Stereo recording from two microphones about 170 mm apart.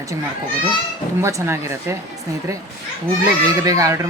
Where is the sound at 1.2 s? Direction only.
15° right (ahead or behind).